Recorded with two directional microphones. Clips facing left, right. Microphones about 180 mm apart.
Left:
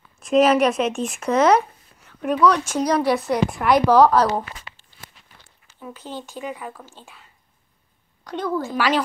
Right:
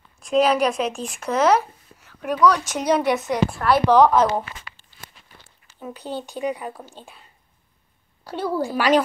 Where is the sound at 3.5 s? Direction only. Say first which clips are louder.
Left 2 dB; 15° left (ahead or behind).